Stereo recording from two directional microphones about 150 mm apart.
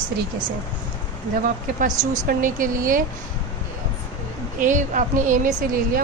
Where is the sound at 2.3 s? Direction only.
65° right (ahead or behind).